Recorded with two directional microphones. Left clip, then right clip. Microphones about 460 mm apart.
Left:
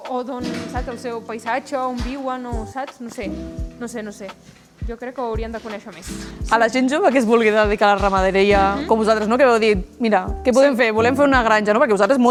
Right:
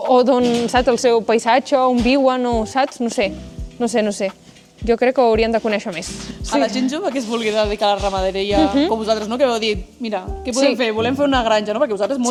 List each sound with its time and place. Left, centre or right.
0.1 s speech: right
2.0 s speech: right
6.5 s speech: left